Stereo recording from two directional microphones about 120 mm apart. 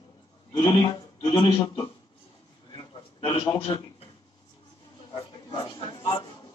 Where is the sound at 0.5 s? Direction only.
40° left (ahead or behind).